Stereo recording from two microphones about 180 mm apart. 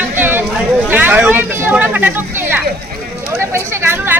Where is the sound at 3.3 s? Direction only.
15° right (ahead or behind).